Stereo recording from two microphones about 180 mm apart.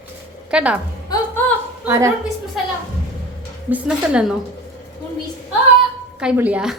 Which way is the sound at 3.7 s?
5° right (ahead or behind).